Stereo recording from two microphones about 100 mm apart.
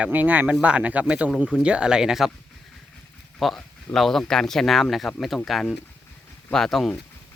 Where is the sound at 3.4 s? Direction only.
5° left (ahead or behind).